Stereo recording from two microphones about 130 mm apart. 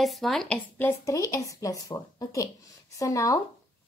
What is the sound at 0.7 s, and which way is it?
Speech, 15° left (ahead or behind).